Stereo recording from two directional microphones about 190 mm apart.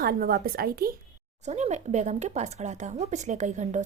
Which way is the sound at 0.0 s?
50° right (ahead or behind).